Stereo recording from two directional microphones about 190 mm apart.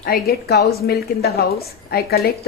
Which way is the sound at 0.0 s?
55° left (ahead or behind).